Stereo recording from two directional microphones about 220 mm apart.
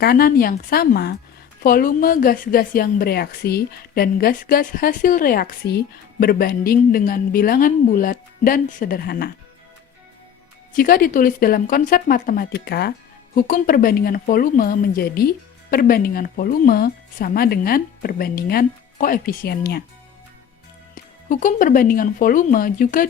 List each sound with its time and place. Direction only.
0.0 s a woman's voice: 45° left (ahead or behind)
10.8 s a woman's voice: 40° left (ahead or behind)
20.9 s a woman's voice: 35° left (ahead or behind)